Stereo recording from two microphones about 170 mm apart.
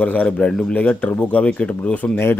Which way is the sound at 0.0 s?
10° left (ahead or behind).